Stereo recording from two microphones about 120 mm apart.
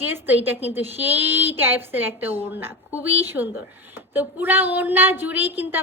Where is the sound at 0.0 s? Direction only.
15° right (ahead or behind).